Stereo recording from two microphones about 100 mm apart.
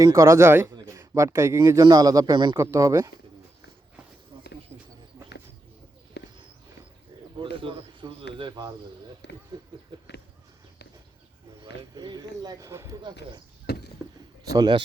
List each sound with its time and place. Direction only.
0.0 s a man's voice: 30° right (ahead or behind)
2.6 s a man's voice: 30° right (ahead or behind)
4.7 s a sound: 30° right (ahead or behind)
7.5 s bird: 60° right (ahead or behind)
11.9 s a man's voice: 45° right (ahead or behind)
13.0 s speech: 50° right (ahead or behind)
14.5 s speech: 45° right (ahead or behind)